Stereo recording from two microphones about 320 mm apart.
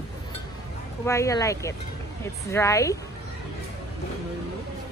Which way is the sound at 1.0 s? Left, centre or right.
Centre.